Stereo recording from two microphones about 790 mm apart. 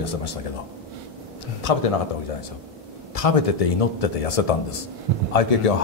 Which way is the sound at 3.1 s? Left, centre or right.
Left.